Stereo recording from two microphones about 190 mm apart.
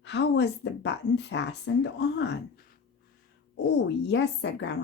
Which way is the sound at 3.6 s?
65° left (ahead or behind).